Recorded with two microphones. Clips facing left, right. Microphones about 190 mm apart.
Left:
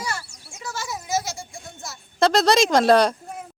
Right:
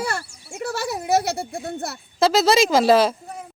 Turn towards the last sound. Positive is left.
turn(degrees=-5)  # may be behind; listen again after turning